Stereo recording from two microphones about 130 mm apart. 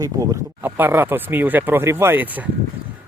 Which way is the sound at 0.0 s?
25° right (ahead or behind).